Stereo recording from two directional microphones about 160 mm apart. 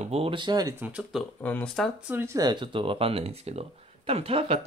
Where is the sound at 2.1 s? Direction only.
15° right (ahead or behind).